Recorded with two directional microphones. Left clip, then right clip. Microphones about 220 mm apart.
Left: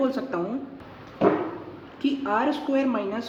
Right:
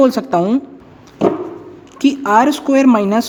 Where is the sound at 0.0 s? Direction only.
40° right (ahead or behind).